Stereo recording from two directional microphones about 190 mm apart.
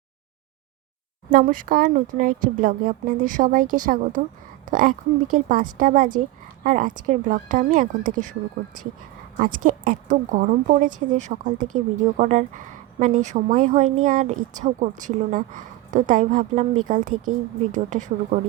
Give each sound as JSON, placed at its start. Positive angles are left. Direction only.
{"t": 1.3, "sound": "a woman's voice", "side_deg": -45}